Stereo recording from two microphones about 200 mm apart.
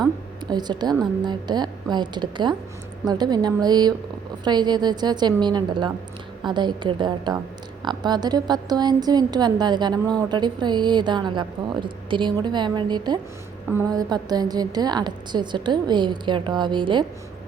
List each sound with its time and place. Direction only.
0.4 s a woman's voice: 20° right (ahead or behind)